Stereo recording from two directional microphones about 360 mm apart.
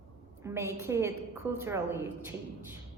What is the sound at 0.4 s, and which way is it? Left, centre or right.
A woman's voice, centre.